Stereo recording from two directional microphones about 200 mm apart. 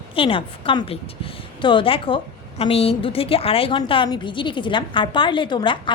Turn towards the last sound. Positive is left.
turn(degrees=25)  # may be behind; listen again after turning